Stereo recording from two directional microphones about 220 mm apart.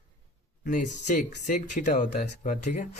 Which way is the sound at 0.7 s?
35° left (ahead or behind).